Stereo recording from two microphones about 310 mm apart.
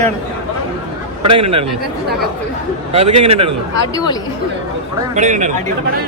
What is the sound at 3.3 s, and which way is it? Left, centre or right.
Speech, centre.